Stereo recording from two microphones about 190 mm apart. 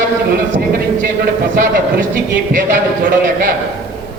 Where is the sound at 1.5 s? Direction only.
50° right (ahead or behind).